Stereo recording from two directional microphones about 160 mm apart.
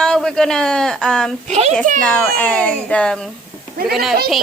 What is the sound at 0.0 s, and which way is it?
A man's voice, 5° left (ahead or behind).